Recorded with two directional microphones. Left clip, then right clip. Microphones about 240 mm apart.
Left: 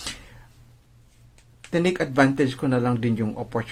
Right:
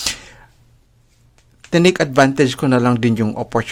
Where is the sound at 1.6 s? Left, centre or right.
Right.